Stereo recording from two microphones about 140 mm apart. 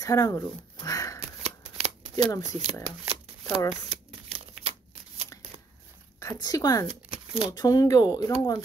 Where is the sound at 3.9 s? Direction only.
45° right (ahead or behind).